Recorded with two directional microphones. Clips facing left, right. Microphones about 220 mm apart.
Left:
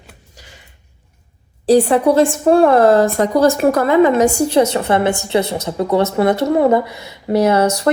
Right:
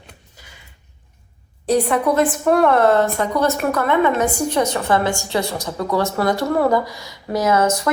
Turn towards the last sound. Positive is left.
turn(degrees=30)  # may be behind; listen again after turning